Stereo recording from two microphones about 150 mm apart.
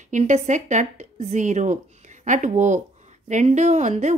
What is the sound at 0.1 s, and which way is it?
A woman's voice, 55° right (ahead or behind).